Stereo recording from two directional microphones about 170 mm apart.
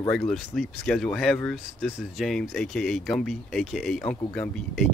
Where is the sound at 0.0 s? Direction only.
20° left (ahead or behind).